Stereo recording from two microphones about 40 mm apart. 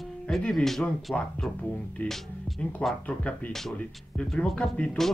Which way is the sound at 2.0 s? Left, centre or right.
Left.